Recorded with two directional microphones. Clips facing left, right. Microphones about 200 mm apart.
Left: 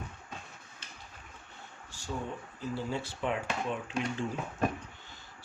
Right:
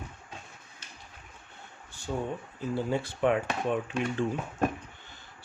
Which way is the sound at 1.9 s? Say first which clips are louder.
Right 5 dB; 55° right (ahead or behind).